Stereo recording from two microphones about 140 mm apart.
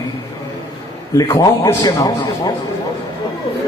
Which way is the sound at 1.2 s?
25° left (ahead or behind).